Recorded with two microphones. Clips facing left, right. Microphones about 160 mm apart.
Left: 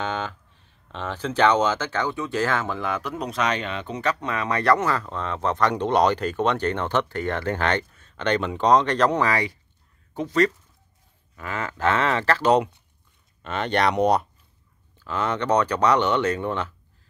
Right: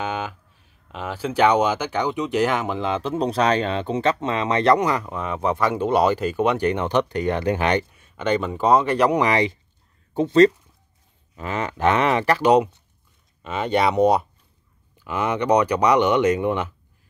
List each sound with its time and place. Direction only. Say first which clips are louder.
0.0 s speech: right 1 dB; 10° right (ahead or behind)